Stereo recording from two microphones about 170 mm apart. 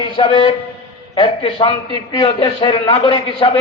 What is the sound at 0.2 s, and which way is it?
A man's voice, 30° left (ahead or behind).